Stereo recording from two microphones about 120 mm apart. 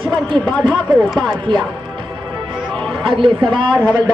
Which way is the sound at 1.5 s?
40° right (ahead or behind).